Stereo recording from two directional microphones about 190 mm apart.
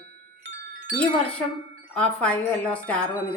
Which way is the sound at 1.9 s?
5° left (ahead or behind).